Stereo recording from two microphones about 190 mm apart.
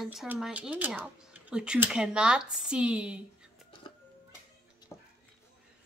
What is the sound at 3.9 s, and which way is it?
Music, 25° left (ahead or behind).